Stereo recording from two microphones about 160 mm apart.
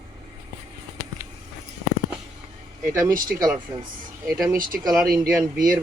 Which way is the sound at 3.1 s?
60° right (ahead or behind).